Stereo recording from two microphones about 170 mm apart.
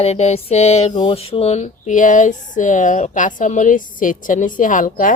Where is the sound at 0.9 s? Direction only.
30° left (ahead or behind).